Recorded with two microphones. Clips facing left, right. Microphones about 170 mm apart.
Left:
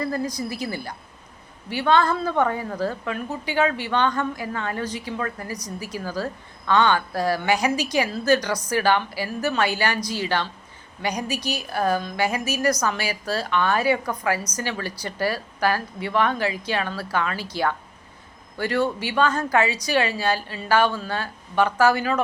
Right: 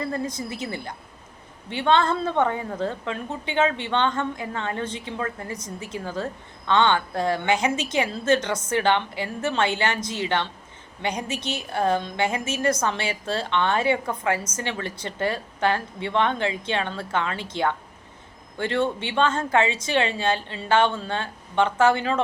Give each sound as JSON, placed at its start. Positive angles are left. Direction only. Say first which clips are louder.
{"t": 0.0, "sound": "a woman's voice", "louder": "left 2 dB", "side_deg": -25}